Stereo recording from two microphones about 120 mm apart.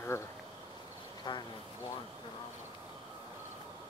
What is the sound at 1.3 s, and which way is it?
Speech, 40° left (ahead or behind).